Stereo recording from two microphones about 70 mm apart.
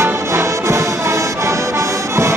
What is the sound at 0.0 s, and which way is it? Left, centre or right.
Music, right.